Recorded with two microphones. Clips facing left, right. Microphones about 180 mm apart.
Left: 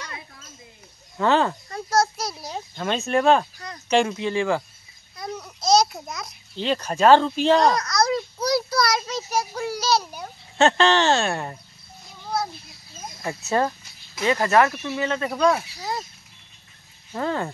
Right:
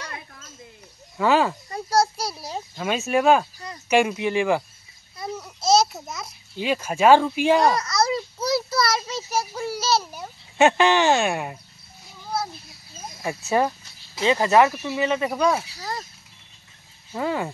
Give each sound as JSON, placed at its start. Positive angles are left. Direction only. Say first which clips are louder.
{"t": 1.1, "sound": "speech", "louder": "even", "side_deg": -10}
{"t": 5.1, "sound": "babbling", "louder": "right 1 dB", "side_deg": -5}
{"t": 13.5, "sound": "speech", "louder": "right 1 dB", "side_deg": -15}
{"t": 15.8, "sound": "a sound", "louder": "left 2 dB", "side_deg": 15}
{"t": 17.1, "sound": "speech", "louder": "even", "side_deg": -10}